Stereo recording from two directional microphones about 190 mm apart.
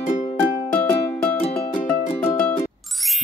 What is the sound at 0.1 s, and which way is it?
Music, 35° left (ahead or behind).